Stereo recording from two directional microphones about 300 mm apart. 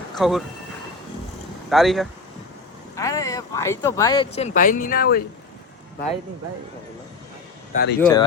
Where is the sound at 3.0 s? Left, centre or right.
Centre; by 5.2 s left.